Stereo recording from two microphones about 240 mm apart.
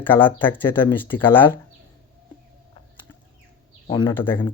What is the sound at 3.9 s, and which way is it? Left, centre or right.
Speech, centre.